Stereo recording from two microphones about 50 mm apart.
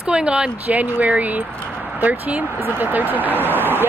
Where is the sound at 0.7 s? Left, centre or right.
Right.